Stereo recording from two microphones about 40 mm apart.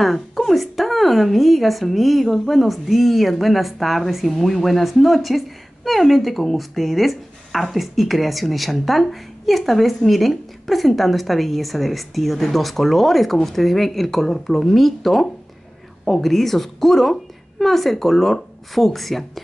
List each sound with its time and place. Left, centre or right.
0.0 s a woman's voice: centre